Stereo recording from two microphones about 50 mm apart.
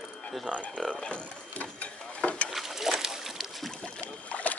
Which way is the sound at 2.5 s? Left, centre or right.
Centre.